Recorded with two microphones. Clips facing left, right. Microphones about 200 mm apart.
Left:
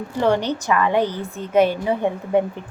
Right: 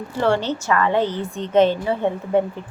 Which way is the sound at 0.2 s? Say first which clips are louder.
Left 1 dB; 15° left (ahead or behind).